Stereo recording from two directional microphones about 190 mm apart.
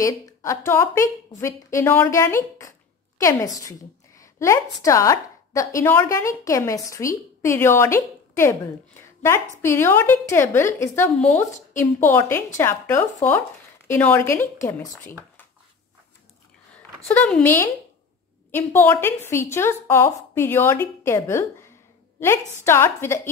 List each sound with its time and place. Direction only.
0.0 s a woman's voice: 15° left (ahead or behind)
17.1 s a woman's voice: 10° left (ahead or behind)